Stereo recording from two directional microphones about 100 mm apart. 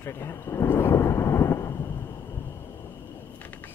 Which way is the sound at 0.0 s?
25° left (ahead or behind).